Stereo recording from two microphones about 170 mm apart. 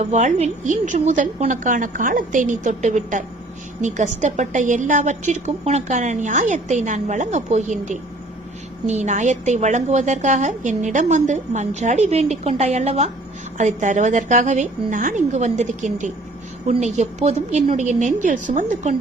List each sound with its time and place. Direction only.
0.0 s a woman's voice: 45° right (ahead or behind)